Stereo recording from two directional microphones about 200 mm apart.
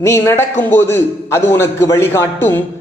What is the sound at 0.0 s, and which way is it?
A man's voice, 15° left (ahead or behind).